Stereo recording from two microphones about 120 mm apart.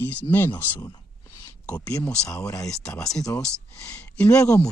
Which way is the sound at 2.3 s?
25° left (ahead or behind).